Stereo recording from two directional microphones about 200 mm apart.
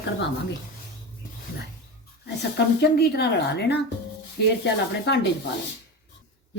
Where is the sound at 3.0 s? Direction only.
55° left (ahead or behind).